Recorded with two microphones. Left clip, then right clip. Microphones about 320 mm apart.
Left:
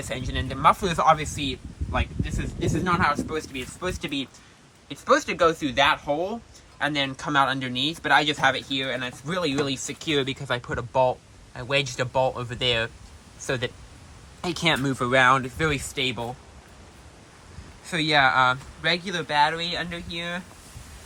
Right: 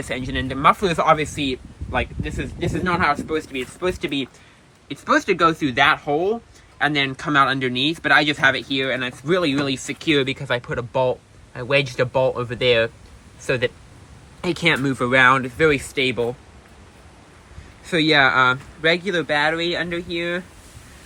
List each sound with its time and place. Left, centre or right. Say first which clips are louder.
0.0 s speech: right 5 dB; centre
17.8 s speech: right 4 dB; centre